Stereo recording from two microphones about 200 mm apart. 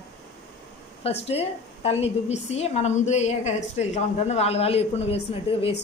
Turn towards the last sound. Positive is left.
turn(degrees=30)  # may be behind; listen again after turning